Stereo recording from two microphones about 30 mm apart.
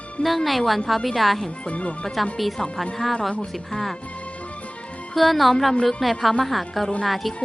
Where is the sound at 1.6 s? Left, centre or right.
Left.